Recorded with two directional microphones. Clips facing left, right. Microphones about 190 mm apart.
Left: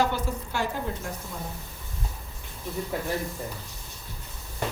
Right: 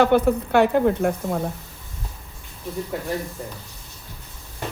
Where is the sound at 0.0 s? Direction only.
60° right (ahead or behind).